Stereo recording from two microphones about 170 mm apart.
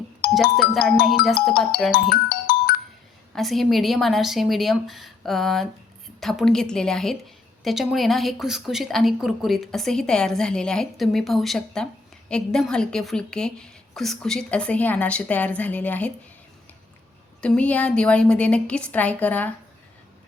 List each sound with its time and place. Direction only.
0.5 s a woman's voice: centre (ahead or behind)
1.9 s speech: 60° left (ahead or behind)
3.3 s a woman's voice: centre (ahead or behind)
17.4 s a woman's voice: 5° left (ahead or behind)